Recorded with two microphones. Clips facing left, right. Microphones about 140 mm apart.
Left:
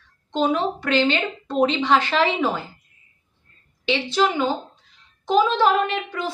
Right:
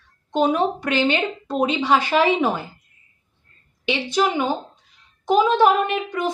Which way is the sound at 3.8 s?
15° right (ahead or behind).